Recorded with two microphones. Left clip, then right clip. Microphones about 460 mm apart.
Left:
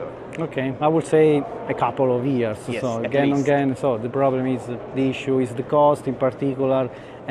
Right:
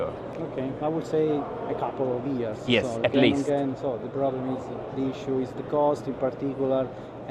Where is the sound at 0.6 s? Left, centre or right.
Left.